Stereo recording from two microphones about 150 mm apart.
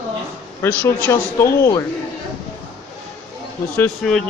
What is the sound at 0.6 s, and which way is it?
Speech, 15° left (ahead or behind).